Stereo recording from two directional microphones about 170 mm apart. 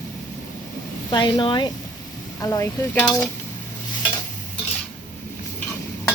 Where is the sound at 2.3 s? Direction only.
15° left (ahead or behind).